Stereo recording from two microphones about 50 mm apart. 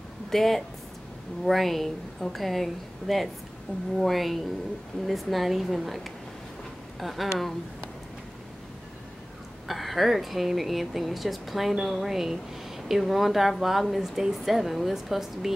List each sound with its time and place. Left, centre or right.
0.3 s speech: centre
3.7 s speech: left
4.0 s speech: centre
9.7 s speech: centre